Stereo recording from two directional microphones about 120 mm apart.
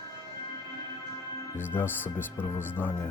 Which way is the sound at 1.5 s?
20° left (ahead or behind).